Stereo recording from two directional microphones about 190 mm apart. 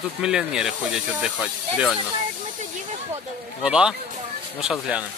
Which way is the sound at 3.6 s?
5° right (ahead or behind).